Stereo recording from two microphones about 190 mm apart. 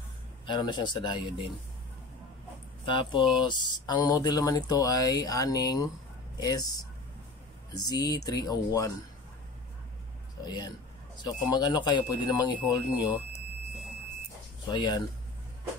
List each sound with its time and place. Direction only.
0.5 s speech: 25° left (ahead or behind)
2.8 s speech: 25° left (ahead or behind)
7.7 s speech: 20° left (ahead or behind)
10.4 s speech: 20° left (ahead or behind)
14.7 s speech: 20° left (ahead or behind)